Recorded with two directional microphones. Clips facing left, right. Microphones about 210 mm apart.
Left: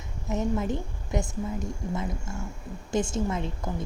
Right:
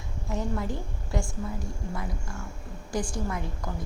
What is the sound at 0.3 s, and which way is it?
A woman's voice, 20° left (ahead or behind).